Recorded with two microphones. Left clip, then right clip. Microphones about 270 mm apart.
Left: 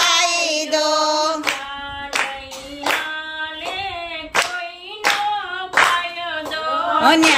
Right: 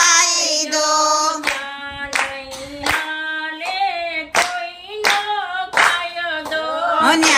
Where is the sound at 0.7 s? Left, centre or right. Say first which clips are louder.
Right 1 dB; centre.